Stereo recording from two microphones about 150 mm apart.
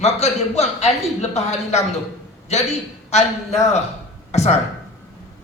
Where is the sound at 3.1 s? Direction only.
45° left (ahead or behind).